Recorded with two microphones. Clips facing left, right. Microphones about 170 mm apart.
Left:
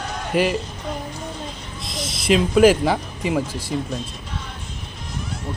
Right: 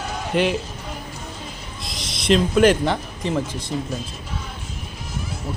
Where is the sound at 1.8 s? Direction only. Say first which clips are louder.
Left 4 dB; centre (ahead or behind).